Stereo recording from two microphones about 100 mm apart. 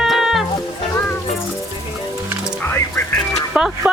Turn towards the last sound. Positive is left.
turn(degrees=-10)  # may be behind; listen again after turning